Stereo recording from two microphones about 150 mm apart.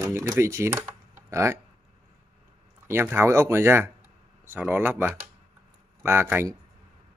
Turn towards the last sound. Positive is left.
turn(degrees=-15)  # may be behind; listen again after turning